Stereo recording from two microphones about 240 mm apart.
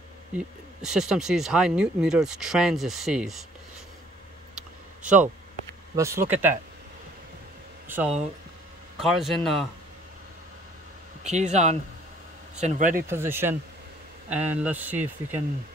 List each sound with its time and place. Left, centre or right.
0.8 s speech: centre
5.9 s speech: centre
7.9 s speech: centre
11.2 s speech: right
13.0 s speech: centre